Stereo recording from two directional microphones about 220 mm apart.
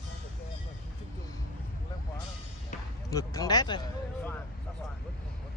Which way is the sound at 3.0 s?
15° left (ahead or behind).